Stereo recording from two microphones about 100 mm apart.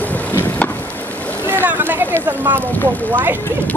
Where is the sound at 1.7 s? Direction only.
20° right (ahead or behind).